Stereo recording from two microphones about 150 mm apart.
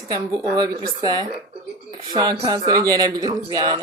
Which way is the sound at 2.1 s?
25° right (ahead or behind).